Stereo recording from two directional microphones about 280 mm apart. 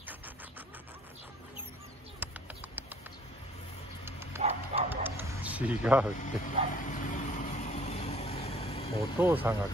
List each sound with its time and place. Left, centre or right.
2.2 s a sound: centre
4.0 s dog: centre
4.4 s bow-wow: right
4.8 s a sound: centre
6.1 s vehicle: left
9.2 s speech: centre